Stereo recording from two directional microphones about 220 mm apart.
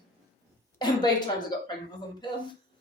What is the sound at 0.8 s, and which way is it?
Speech, 20° left (ahead or behind).